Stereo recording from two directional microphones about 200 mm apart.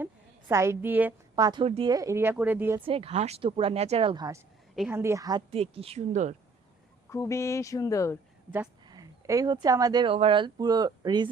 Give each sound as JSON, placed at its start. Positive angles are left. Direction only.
{"t": 0.4, "sound": "speech", "side_deg": -15}
{"t": 1.5, "sound": "speech", "side_deg": -25}
{"t": 2.8, "sound": "speech", "side_deg": -30}
{"t": 5.5, "sound": "speech", "side_deg": -30}
{"t": 7.1, "sound": "speech", "side_deg": 15}
{"t": 8.4, "sound": "speech", "side_deg": -10}